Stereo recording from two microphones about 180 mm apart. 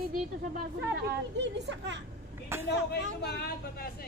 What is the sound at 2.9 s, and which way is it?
Speech, 65° left (ahead or behind).